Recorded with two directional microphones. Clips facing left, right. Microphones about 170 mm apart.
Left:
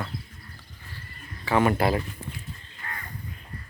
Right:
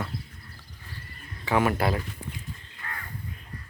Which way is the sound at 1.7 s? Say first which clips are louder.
Left 3 dB; centre (ahead or behind).